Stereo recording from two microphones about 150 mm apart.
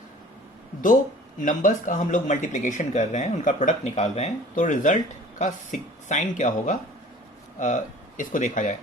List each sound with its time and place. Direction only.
1.4 s speech: 60° left (ahead or behind)